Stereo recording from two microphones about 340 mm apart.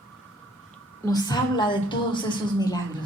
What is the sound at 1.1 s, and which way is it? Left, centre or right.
A woman's voice, centre.